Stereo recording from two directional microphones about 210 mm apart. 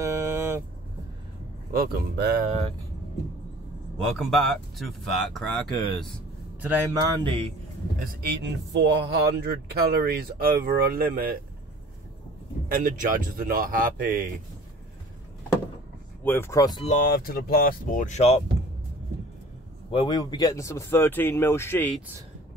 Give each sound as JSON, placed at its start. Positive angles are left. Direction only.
{"t": 0.0, "sound": "vehicle", "side_deg": -10}
{"t": 1.7, "sound": "a man's voice", "side_deg": -45}
{"t": 4.2, "sound": "speech", "side_deg": 0}
{"t": 6.6, "sound": "a man's voice", "side_deg": -15}
{"t": 7.2, "sound": "speech", "side_deg": -25}
{"t": 8.0, "sound": "a man's voice", "side_deg": -50}
{"t": 12.6, "sound": "speech", "side_deg": -40}
{"t": 16.3, "sound": "speech", "side_deg": 10}
{"t": 16.8, "sound": "speech", "side_deg": 40}
{"t": 19.9, "sound": "speech", "side_deg": 25}